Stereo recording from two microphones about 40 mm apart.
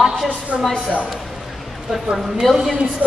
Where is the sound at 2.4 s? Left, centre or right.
Centre.